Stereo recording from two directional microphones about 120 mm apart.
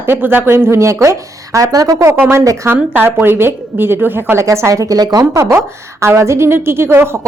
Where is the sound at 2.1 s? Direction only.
15° right (ahead or behind).